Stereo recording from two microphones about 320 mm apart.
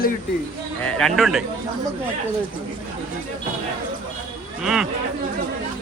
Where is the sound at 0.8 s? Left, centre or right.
Centre.